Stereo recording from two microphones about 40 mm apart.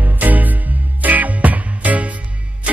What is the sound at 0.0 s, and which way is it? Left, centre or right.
Music, right.